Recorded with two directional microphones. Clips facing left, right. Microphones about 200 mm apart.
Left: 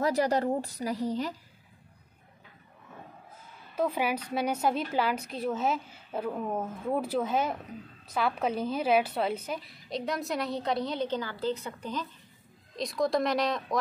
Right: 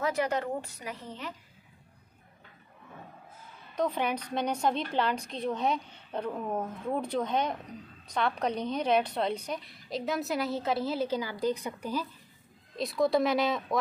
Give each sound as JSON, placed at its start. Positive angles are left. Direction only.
{"t": 0.0, "sound": "a woman's voice", "side_deg": 35}
{"t": 3.7, "sound": "a woman's voice", "side_deg": 5}